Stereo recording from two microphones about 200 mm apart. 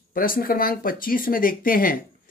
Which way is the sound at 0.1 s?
45° left (ahead or behind).